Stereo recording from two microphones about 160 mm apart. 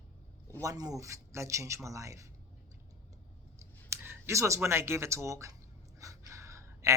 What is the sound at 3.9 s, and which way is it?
Speech, 15° right (ahead or behind).